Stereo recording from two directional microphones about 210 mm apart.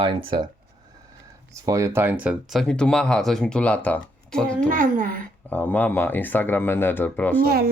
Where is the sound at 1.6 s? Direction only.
15° right (ahead or behind); by 4.7 s 5° left (ahead or behind).